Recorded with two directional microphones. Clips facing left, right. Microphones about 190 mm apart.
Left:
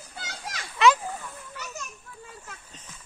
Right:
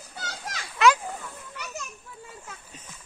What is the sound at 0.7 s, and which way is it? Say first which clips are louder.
Children playing: even; centre (ahead or behind).